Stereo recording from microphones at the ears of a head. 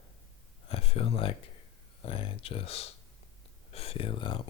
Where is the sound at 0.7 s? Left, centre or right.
Left.